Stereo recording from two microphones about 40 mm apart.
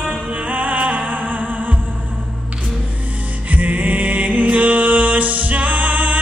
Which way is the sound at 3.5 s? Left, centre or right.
Right.